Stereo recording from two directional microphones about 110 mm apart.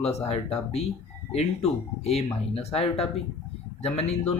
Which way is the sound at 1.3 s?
70° left (ahead or behind).